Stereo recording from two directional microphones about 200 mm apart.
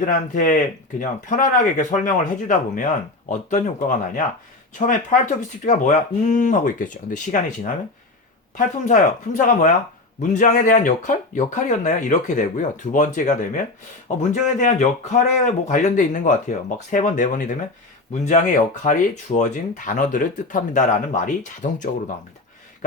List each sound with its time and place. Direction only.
0.0 s speech: 40° left (ahead or behind)
8.5 s speech: 40° left (ahead or behind)